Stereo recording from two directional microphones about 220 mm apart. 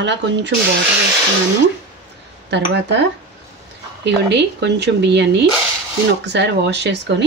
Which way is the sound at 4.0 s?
50° right (ahead or behind).